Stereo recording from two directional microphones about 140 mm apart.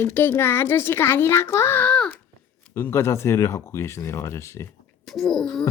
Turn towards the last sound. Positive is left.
turn(degrees=5)  # may be behind; listen again after turning